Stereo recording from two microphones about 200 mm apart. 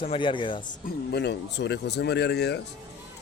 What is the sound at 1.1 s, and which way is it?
Speech, 55° left (ahead or behind).